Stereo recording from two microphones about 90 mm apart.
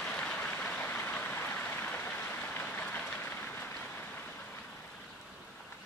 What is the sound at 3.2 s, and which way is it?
Vehicle, 20° left (ahead or behind).